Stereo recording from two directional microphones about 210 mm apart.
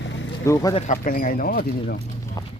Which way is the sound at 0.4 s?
15° left (ahead or behind).